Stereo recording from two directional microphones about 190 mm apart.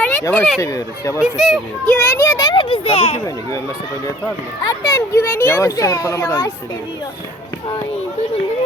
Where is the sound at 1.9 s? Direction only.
10° left (ahead or behind); by 3.2 s 30° left (ahead or behind).